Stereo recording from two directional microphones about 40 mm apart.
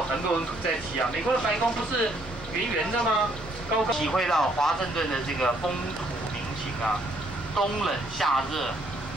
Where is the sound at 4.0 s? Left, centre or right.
Centre.